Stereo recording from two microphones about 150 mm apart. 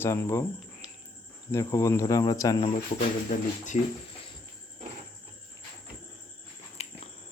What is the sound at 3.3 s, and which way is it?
Speech, 65° left (ahead or behind).